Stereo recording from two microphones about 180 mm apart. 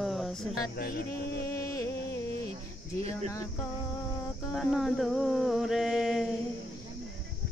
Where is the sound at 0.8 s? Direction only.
55° left (ahead or behind).